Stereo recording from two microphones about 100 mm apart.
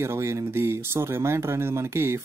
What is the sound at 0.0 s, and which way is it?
Speech, 25° right (ahead or behind).